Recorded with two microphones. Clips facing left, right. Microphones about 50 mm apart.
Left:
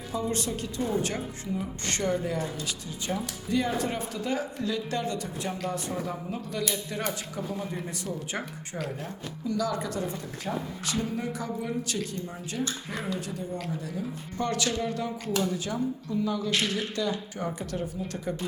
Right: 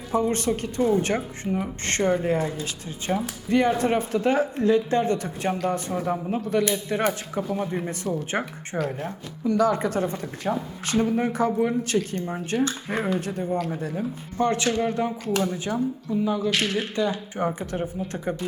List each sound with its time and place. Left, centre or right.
0.1 s speech: right
3.2 s speech: right
9.5 s speech: right
14.3 s speech: right